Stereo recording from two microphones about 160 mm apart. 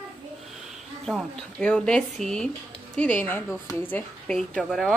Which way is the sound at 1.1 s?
5° left (ahead or behind).